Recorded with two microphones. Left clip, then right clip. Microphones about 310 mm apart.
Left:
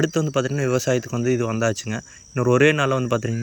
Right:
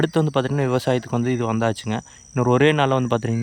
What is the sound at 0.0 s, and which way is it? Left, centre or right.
Speech, centre.